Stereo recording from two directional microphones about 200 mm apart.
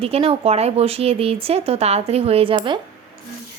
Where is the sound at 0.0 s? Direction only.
30° right (ahead or behind).